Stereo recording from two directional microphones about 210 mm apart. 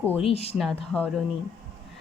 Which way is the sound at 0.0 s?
5° left (ahead or behind).